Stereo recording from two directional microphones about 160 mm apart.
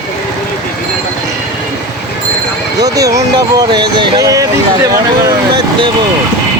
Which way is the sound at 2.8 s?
20° right (ahead or behind).